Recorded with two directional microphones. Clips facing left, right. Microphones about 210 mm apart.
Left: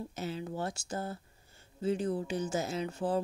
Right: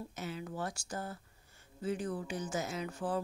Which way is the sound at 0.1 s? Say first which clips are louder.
Left 4 dB; 30° left (ahead or behind).